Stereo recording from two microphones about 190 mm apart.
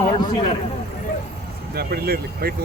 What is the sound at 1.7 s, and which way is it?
Speech, 55° right (ahead or behind).